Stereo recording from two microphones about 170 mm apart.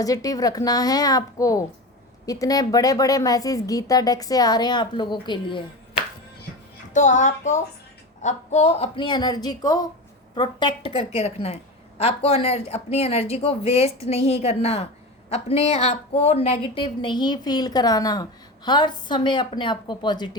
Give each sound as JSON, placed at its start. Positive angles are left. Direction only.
{"t": 0.0, "sound": "a woman's voice", "side_deg": 20}
{"t": 6.9, "sound": "a child's voice", "side_deg": 45}
{"t": 10.9, "sound": "a woman's voice", "side_deg": 40}